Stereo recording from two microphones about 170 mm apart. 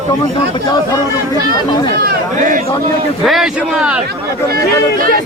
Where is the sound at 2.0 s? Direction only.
65° right (ahead or behind).